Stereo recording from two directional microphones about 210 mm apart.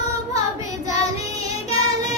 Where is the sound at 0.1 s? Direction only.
15° right (ahead or behind).